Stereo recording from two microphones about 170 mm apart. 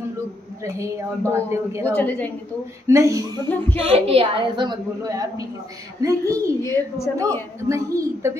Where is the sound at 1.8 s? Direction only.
10° left (ahead or behind).